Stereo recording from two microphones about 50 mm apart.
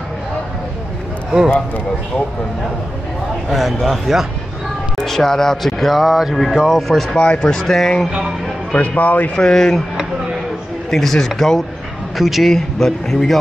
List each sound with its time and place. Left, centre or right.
3.4 s speech: centre
4.9 s speech: centre
7.2 s speech: centre
8.7 s speech: left
9.3 s speech: centre
10.9 s speech: centre